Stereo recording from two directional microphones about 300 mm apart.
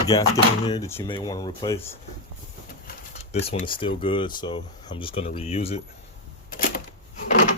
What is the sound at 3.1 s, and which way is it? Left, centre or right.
Speech, left.